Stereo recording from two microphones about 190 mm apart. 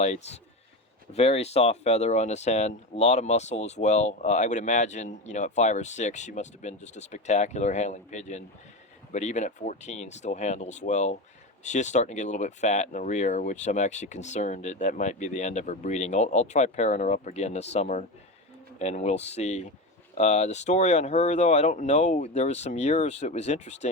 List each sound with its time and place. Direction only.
0.0 s speech: 35° left (ahead or behind)